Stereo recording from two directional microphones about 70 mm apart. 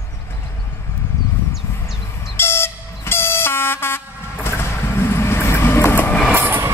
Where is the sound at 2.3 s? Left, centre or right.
Left.